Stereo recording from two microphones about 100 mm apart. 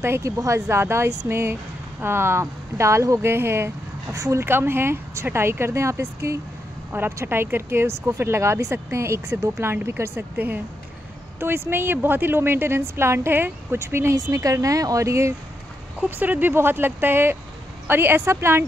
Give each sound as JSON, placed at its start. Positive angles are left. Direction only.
{"t": 0.0, "sound": "speech", "side_deg": -30}
{"t": 16.0, "sound": "speech", "side_deg": -15}